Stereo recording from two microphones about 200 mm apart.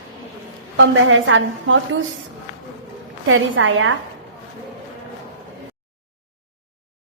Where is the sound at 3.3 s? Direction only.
75° right (ahead or behind).